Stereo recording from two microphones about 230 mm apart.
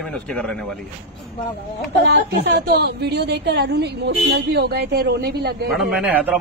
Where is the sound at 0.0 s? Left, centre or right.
Centre.